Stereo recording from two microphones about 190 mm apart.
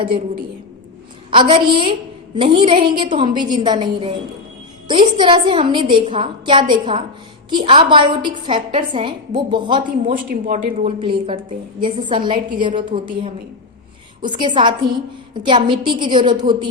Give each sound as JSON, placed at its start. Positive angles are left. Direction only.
{"t": 1.3, "sound": "a woman's voice", "side_deg": -25}
{"t": 10.1, "sound": "a woman's voice", "side_deg": -45}
{"t": 10.8, "sound": "a woman's voice", "side_deg": -30}